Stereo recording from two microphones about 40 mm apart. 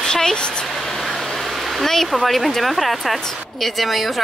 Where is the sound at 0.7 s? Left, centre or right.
Centre.